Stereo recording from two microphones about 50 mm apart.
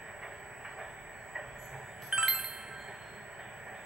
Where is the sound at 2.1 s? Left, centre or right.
Centre.